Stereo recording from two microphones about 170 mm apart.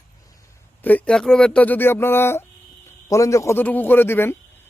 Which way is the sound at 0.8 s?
10° left (ahead or behind).